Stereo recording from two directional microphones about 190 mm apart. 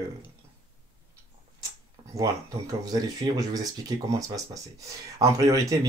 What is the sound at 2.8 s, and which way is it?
Speech, 20° right (ahead or behind).